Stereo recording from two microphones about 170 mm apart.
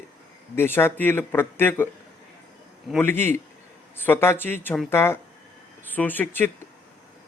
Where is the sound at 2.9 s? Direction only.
15° left (ahead or behind).